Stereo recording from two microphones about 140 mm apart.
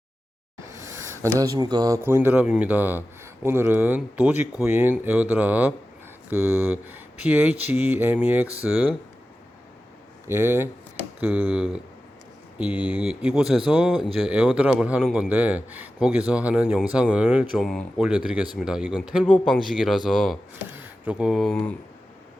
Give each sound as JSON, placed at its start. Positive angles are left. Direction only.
{"t": 0.6, "sound": "a sound", "side_deg": -20}
{"t": 1.4, "sound": "speech", "side_deg": -30}
{"t": 2.0, "sound": "speech", "side_deg": -15}
{"t": 10.2, "sound": "speech", "side_deg": -15}
{"t": 17.5, "sound": "speech", "side_deg": 0}
{"t": 19.2, "sound": "speech", "side_deg": 5}
{"t": 20.7, "sound": "a sound", "side_deg": -15}
{"t": 21.5, "sound": "speech", "side_deg": 15}